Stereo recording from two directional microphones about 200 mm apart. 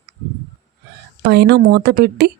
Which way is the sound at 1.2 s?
55° right (ahead or behind).